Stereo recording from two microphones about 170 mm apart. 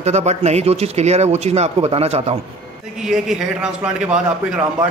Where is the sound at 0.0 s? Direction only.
40° right (ahead or behind).